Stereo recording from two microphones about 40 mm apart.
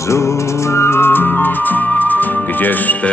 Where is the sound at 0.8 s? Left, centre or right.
Left.